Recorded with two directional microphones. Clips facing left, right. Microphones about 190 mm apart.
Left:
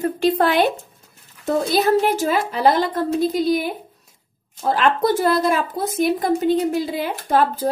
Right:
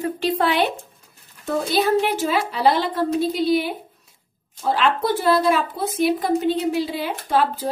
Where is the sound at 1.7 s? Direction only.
45° left (ahead or behind).